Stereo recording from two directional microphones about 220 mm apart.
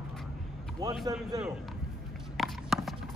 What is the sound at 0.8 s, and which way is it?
Speech, 15° right (ahead or behind).